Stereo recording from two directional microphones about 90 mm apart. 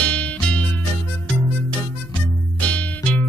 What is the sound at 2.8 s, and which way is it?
Music, 10° left (ahead or behind).